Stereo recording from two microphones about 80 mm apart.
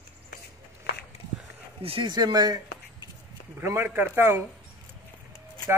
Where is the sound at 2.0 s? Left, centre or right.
Right.